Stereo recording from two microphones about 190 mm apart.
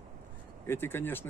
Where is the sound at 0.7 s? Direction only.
10° left (ahead or behind).